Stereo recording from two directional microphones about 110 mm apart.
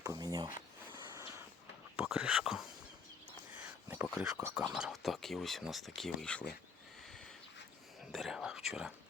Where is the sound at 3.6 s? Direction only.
20° right (ahead or behind).